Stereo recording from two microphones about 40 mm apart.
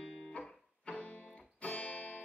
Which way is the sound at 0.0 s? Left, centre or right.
Left.